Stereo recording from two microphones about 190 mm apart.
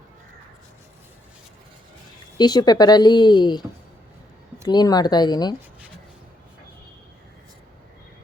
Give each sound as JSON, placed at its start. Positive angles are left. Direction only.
{"t": 2.4, "sound": "speech", "side_deg": 20}
{"t": 4.7, "sound": "speech", "side_deg": 20}